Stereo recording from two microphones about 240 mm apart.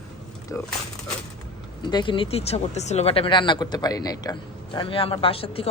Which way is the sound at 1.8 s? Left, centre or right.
Centre.